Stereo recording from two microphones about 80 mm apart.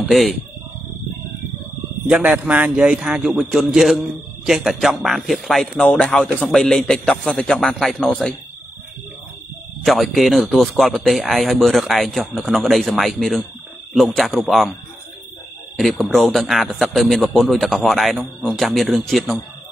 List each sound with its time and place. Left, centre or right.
0.1 s a man's voice: centre
2.0 s speech: centre
2.7 s a man's voice: centre
5.8 s a man's voice: centre
9.8 s a man's voice: centre
15.8 s a man's voice: centre